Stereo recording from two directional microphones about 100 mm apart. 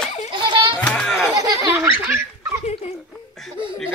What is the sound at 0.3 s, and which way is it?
Children playing, 50° right (ahead or behind).